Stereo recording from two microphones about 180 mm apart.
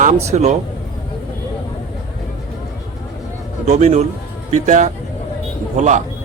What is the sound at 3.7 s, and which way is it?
Speech, 40° right (ahead or behind).